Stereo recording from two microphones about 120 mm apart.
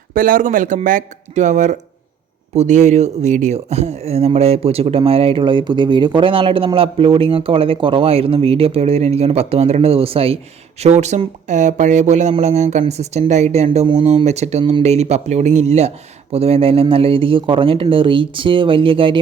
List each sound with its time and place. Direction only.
0.4 s a man's voice: 90° right; by 10.3 s 55° right (ahead or behind)
10.8 s a woman's voice: 70° right (ahead or behind)
11.4 s a woman's voice: 90° right; by 14.2 s 55° right (ahead or behind)
14.3 s a man's voice: 65° right (ahead or behind); by 19.2 s 45° right (ahead or behind)